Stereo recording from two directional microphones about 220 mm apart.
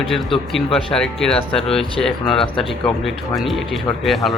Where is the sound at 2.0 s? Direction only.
Centre (ahead or behind).